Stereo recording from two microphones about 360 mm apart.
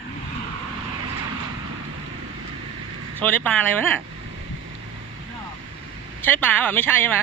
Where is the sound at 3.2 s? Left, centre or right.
Centre.